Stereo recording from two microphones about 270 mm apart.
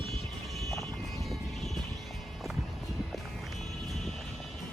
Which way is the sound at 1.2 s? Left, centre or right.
Centre.